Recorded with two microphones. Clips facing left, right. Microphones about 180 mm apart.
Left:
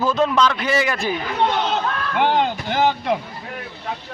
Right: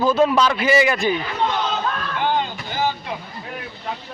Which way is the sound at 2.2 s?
70° left (ahead or behind).